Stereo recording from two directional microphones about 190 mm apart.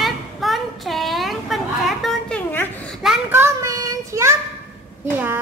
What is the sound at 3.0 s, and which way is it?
Child singing, 5° right (ahead or behind).